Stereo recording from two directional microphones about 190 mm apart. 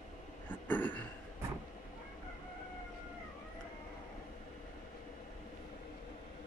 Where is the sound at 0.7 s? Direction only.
10° left (ahead or behind).